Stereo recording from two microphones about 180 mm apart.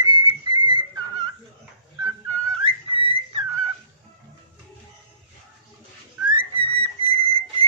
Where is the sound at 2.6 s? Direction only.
30° right (ahead or behind).